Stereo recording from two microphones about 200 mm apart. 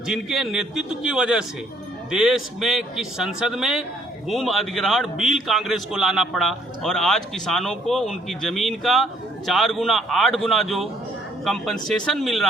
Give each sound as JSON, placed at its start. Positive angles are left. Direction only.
{"t": 0.1, "sound": "a man's voice", "side_deg": 0}